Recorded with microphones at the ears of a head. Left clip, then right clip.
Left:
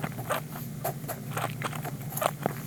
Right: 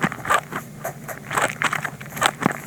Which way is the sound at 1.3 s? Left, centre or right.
Right.